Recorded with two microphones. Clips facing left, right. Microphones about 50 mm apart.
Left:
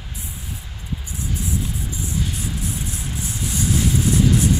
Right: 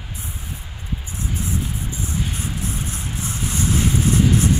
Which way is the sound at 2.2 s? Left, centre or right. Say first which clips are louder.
Even; right.